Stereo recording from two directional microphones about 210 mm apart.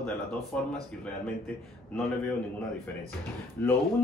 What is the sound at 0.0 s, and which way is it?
Speech, 5° left (ahead or behind).